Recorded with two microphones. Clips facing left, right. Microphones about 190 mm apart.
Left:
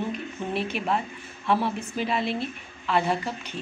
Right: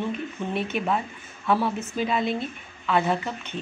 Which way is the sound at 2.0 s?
5° left (ahead or behind).